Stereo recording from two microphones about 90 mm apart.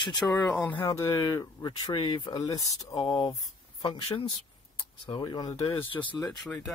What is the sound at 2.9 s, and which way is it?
Speech, 60° left (ahead or behind).